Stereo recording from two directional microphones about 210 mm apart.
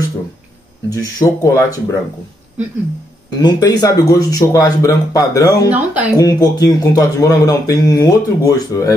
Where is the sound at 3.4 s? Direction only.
20° left (ahead or behind).